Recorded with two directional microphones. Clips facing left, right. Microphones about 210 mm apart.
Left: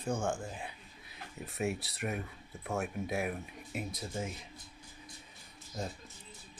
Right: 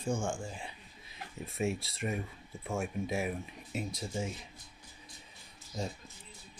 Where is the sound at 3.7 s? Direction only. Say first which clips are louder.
Right 2 dB; 55° left (ahead or behind).